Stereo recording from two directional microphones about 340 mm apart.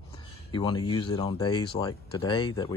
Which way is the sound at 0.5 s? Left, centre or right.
Centre.